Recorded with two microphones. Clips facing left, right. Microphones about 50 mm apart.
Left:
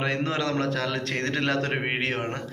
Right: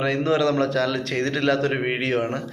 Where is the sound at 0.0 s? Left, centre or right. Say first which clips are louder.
Right 6 dB; left.